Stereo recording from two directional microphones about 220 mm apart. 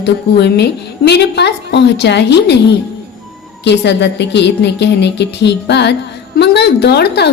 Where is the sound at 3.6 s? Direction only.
50° left (ahead or behind).